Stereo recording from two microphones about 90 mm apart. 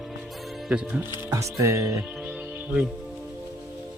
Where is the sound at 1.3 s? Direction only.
35° right (ahead or behind).